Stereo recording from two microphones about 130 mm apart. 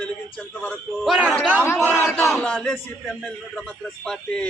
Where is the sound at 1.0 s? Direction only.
10° right (ahead or behind).